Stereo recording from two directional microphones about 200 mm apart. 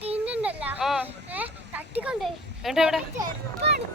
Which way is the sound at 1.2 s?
10° right (ahead or behind).